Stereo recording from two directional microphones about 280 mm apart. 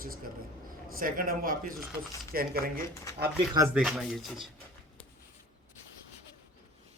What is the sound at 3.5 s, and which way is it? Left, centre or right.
Speech, centre.